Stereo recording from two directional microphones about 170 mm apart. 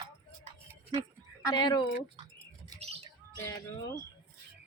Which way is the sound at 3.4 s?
15° left (ahead or behind).